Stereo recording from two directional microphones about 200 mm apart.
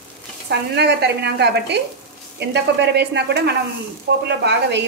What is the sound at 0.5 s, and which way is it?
Speech, 55° right (ahead or behind).